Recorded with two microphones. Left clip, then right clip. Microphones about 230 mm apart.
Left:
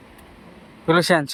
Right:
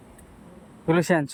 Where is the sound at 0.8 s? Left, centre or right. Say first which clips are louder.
Left 5 dB; centre.